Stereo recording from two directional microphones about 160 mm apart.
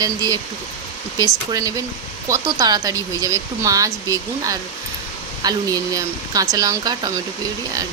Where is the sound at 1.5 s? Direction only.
20° right (ahead or behind).